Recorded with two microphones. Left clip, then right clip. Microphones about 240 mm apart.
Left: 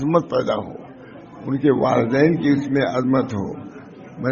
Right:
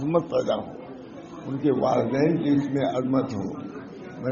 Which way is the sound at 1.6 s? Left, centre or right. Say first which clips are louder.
Left 5 dB; left.